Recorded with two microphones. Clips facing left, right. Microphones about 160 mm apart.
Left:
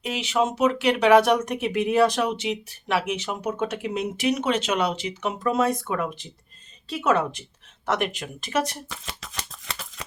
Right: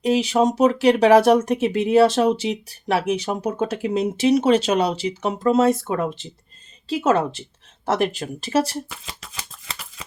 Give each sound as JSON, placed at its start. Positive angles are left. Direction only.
{"t": 0.0, "sound": "speech", "side_deg": -35}
{"t": 8.9, "sound": "shuffling cards", "side_deg": -5}